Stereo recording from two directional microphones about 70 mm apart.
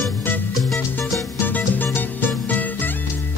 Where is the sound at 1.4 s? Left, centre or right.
Left.